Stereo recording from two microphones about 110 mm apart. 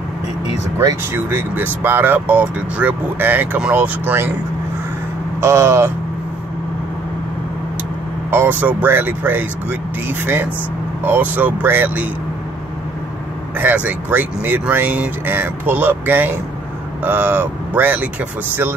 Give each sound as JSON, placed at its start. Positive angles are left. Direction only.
{"t": 0.7, "sound": "speech", "side_deg": -20}
{"t": 5.4, "sound": "speech", "side_deg": -25}
{"t": 8.3, "sound": "speech", "side_deg": -15}
{"t": 13.6, "sound": "speech", "side_deg": -15}